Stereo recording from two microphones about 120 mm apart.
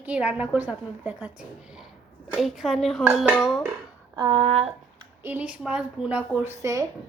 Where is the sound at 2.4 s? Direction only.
Centre (ahead or behind).